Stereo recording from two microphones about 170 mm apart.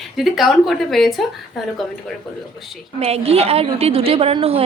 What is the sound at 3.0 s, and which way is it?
A woman's voice, 35° right (ahead or behind).